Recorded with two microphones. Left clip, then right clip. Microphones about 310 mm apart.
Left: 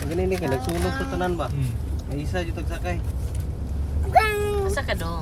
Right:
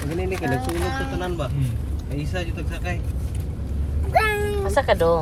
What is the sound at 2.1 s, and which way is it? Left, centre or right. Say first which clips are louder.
Speech: even; left.